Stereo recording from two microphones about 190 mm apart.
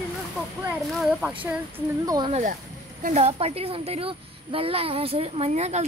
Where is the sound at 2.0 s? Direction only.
20° right (ahead or behind).